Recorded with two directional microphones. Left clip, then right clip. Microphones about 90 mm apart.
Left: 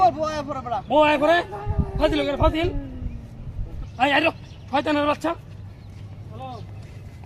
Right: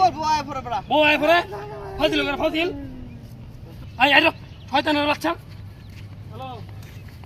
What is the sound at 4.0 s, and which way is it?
Speech, 15° left (ahead or behind).